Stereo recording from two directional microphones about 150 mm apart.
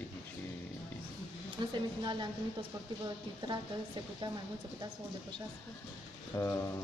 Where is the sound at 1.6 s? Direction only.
30° right (ahead or behind).